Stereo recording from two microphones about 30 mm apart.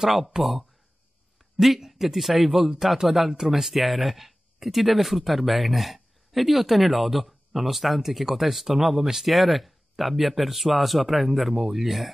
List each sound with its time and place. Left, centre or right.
0.4 s speech: centre
3.3 s speech: centre
3.6 s speech: centre